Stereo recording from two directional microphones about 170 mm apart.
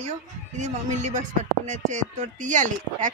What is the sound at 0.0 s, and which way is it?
Speech, 45° right (ahead or behind).